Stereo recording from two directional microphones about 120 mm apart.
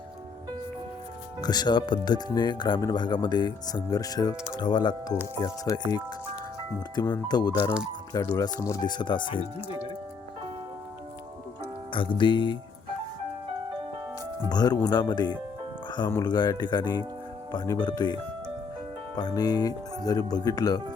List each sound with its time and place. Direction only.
1.4 s speech: 35° left (ahead or behind)
7.1 s speech: 35° left (ahead or behind)
8.9 s speech: 40° left (ahead or behind)
11.9 s music: 45° left (ahead or behind)
14.5 s speech: 35° left (ahead or behind)